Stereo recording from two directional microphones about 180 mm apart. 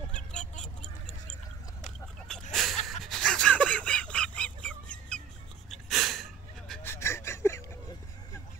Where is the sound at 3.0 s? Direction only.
5° left (ahead or behind).